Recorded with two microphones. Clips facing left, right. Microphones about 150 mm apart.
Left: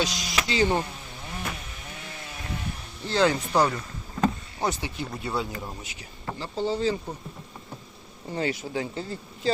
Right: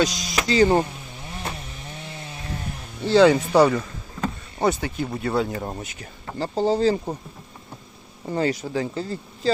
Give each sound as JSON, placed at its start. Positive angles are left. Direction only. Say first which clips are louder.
{"t": 0.0, "sound": "speech", "louder": "right 5 dB", "side_deg": -40}
{"t": 3.0, "sound": "speech", "louder": "right 8 dB", "side_deg": -90}
{"t": 4.6, "sound": "speech", "louder": "right 6 dB", "side_deg": -55}
{"t": 8.3, "sound": "speech", "louder": "right 5 dB", "side_deg": -40}